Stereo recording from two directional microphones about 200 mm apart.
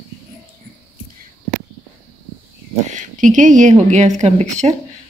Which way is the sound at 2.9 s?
40° right (ahead or behind).